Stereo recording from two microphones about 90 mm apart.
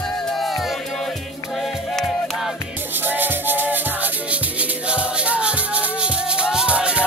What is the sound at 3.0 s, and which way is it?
Music, 20° right (ahead or behind).